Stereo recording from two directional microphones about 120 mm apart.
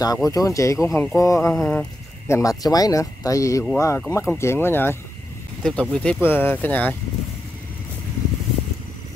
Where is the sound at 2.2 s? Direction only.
25° left (ahead or behind).